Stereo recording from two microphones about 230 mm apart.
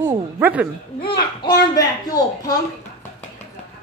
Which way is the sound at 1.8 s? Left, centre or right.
Centre.